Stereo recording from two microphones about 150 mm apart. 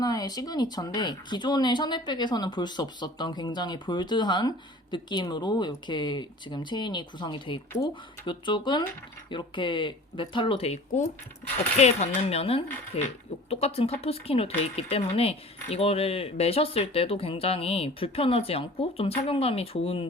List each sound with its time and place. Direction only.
0.0 s speech: 25° left (ahead or behind)